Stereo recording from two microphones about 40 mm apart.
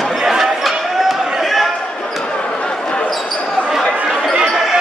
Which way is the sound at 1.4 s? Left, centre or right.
Centre.